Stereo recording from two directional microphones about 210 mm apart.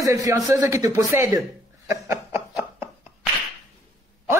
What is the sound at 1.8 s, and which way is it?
Snicker, 15° right (ahead or behind).